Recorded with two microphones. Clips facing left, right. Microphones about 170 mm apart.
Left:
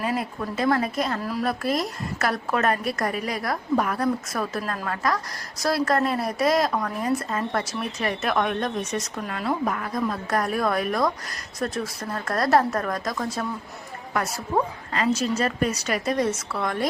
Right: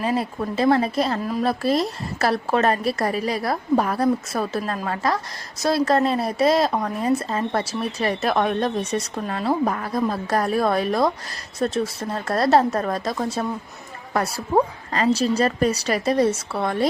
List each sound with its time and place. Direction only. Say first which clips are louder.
0.0 s a woman's voice: right 4 dB; 30° right (ahead or behind)